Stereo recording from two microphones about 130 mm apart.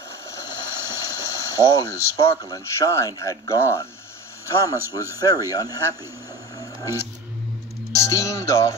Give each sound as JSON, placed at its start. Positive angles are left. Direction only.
{"t": 0.7, "sound": "water", "side_deg": -20}
{"t": 1.0, "sound": "boiling", "side_deg": 25}
{"t": 2.5, "sound": "speech", "side_deg": 25}
{"t": 6.8, "sound": "a sound", "side_deg": 25}
{"t": 7.9, "sound": "music", "side_deg": 25}